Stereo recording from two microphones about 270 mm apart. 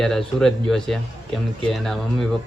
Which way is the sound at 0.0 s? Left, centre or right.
Centre.